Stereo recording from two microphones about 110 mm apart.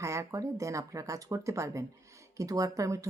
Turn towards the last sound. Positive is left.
turn(degrees=-30)  # may be behind; listen again after turning